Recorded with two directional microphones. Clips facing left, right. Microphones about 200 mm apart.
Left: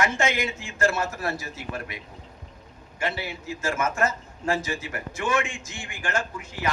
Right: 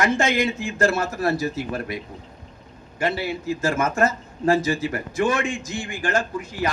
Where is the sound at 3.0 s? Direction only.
35° right (ahead or behind).